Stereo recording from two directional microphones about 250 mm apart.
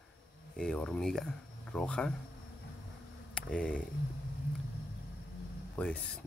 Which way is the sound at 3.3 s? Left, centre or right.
Centre.